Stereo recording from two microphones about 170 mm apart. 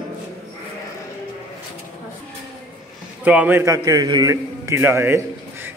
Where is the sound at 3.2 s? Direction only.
10° right (ahead or behind).